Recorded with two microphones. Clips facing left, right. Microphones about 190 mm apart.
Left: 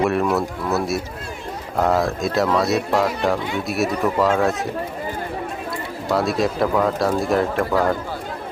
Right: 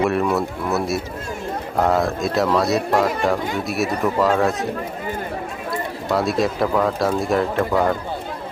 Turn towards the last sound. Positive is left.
turn(degrees=0)  # may be behind; listen again after turning